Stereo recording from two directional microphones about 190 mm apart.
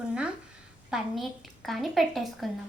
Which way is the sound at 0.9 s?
Centre (ahead or behind).